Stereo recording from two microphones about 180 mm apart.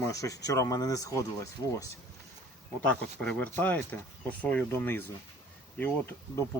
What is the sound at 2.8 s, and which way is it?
Speech, 5° left (ahead or behind).